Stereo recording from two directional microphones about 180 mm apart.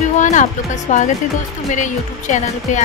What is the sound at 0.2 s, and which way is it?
Music, 45° left (ahead or behind).